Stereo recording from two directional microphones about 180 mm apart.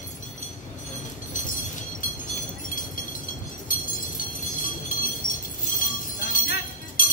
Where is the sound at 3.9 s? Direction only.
50° left (ahead or behind).